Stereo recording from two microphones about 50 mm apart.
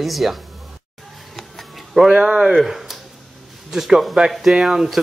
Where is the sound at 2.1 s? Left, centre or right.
Right.